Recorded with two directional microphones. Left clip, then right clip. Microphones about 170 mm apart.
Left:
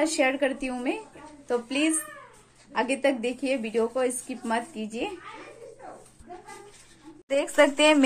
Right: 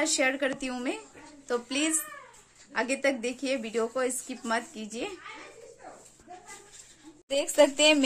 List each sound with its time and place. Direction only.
0.0 s speech: 15° right (ahead or behind)
7.2 s a woman's voice: 5° right (ahead or behind)